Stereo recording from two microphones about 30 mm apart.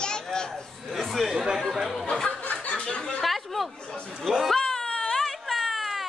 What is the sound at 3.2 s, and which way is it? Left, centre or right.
Chatter, centre.